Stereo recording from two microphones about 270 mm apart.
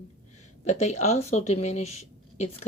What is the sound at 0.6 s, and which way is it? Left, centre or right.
Speech, left.